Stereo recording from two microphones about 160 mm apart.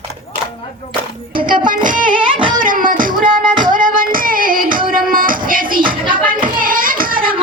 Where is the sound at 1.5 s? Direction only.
55° right (ahead or behind).